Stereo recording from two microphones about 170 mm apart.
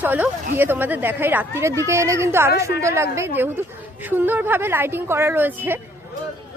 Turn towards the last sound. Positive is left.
turn(degrees=-10)  # may be behind; listen again after turning